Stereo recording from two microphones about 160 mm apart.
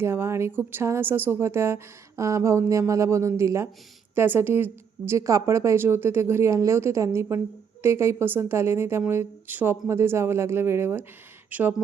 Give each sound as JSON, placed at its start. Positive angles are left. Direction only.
{"t": 0.0, "sound": "a woman's voice", "side_deg": -15}